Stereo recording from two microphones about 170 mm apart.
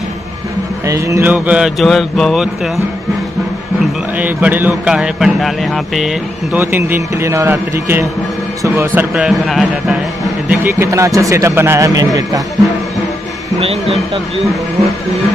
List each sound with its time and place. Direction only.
0.8 s speech: 15° right (ahead or behind); by 2.8 s centre (ahead or behind)
4.2 s speech: 10° right (ahead or behind)
9.1 s speech: centre (ahead or behind)
10.5 s speech: 15° right (ahead or behind)
13.6 s speech: 35° right (ahead or behind)